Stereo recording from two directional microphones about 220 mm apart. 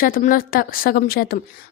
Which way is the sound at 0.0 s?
40° left (ahead or behind).